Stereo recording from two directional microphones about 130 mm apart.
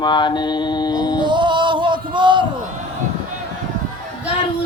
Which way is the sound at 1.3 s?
40° right (ahead or behind).